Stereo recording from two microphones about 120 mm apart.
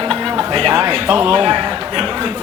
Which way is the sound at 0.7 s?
25° right (ahead or behind).